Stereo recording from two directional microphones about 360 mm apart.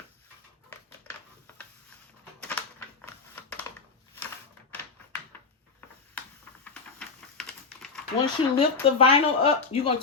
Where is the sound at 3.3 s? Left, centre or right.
Centre.